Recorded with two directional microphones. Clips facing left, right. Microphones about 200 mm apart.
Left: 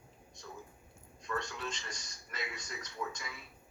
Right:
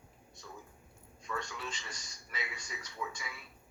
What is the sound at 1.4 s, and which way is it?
A man's voice, 10° right (ahead or behind).